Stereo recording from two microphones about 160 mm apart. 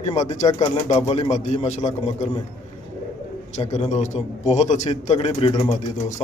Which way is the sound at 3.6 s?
40° left (ahead or behind).